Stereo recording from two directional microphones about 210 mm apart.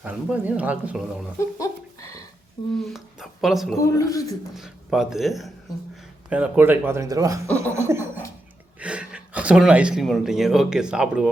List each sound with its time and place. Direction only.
0.0 s speech: 5° right (ahead or behind)
1.4 s a sound: 15° left (ahead or behind)
2.8 s speech: centre (ahead or behind)
3.8 s a man's voice: 15° left (ahead or behind)
4.5 s speech: centre (ahead or behind)